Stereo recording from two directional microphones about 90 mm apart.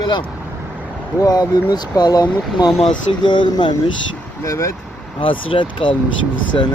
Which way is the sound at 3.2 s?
60° left (ahead or behind).